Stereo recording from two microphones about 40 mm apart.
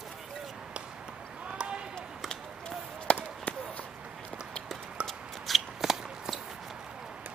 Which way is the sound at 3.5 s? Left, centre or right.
Left.